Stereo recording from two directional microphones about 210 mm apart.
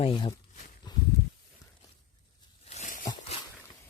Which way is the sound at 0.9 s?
20° left (ahead or behind).